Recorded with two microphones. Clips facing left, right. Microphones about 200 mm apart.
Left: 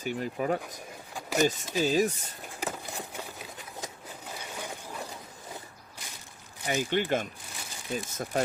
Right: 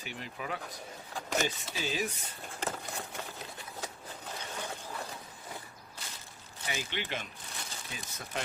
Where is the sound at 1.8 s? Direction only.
40° left (ahead or behind).